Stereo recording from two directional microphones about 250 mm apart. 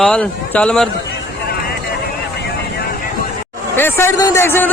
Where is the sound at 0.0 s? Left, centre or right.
Centre.